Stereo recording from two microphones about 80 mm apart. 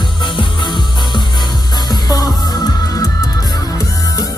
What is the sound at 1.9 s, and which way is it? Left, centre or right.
Music, left.